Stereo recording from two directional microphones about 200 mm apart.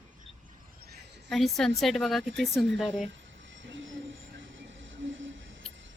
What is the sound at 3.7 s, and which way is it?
Train, 70° right (ahead or behind).